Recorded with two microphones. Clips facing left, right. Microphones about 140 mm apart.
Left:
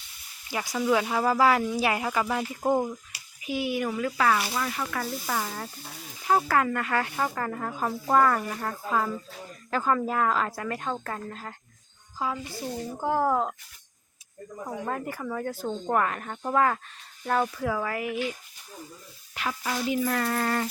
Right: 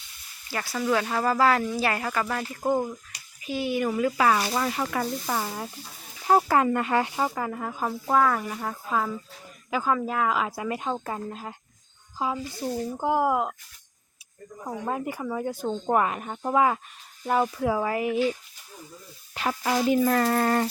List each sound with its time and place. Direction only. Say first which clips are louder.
0.5 s speech: left 1 dB; 15° left (ahead or behind)
3.8 s speech: right 4 dB; 10° right (ahead or behind)
4.5 s speech: right 4 dB; 30° right (ahead or behind)
5.2 s speech: right 2 dB; 10° right (ahead or behind)
6.2 s speech: right 3 dB; 30° right (ahead or behind); by 13.5 s 10° right (ahead or behind)
14.8 s speech: right 4 dB; 15° right (ahead or behind); by 19.5 s 30° right (ahead or behind)
19.9 s speech: right 4 dB; 45° right (ahead or behind)